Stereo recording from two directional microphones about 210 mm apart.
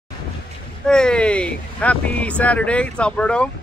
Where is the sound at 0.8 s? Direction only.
5° left (ahead or behind).